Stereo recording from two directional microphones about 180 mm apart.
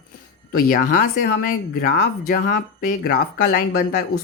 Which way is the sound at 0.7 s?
55° left (ahead or behind).